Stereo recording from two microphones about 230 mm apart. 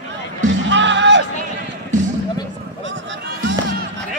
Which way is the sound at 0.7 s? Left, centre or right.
Right.